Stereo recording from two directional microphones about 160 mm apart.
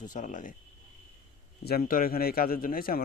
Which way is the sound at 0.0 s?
50° left (ahead or behind).